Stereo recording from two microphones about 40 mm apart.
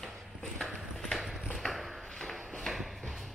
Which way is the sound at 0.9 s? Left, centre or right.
Centre.